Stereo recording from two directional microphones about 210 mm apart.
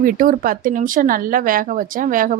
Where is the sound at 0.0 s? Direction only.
40° right (ahead or behind).